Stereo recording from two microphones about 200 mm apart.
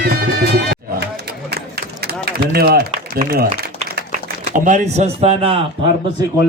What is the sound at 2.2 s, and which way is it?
Speech, 50° right (ahead or behind).